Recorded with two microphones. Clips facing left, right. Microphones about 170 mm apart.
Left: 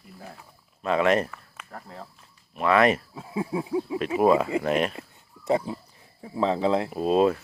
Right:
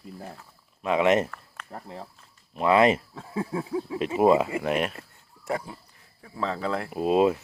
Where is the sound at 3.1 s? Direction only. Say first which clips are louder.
Left 1 dB; 10° left (ahead or behind).